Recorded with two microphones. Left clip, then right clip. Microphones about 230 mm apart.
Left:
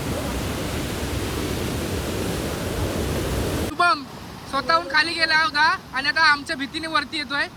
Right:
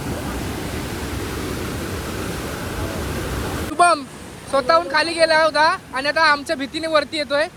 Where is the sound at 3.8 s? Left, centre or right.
Centre.